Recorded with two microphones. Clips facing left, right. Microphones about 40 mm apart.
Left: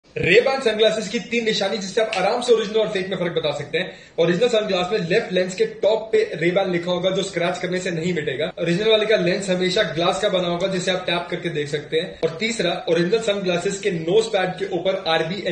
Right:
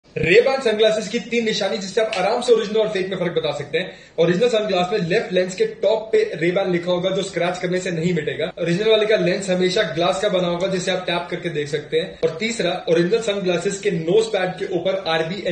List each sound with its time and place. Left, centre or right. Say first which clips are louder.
0.2 s a man's voice: right 1 dB; centre
13.2 s a man's voice: right 1 dB; left; by 15.2 s centre